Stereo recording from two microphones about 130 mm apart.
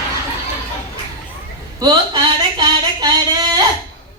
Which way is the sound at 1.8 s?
35° right (ahead or behind).